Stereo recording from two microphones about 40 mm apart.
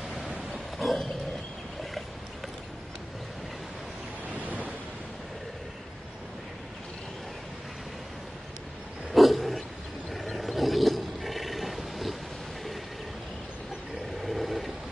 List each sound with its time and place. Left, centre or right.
0.5 s roaring cats: centre
4.3 s waves: right
9.1 s dog: centre
10.1 s wild animals: centre
14.2 s vehicle: centre